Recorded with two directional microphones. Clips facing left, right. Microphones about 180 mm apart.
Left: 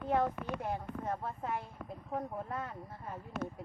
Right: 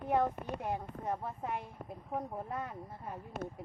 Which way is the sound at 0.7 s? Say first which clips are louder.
Right 2 dB; 15° right (ahead or behind).